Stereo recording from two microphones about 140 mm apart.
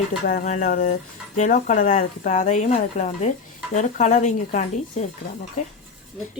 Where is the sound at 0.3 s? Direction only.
65° left (ahead or behind).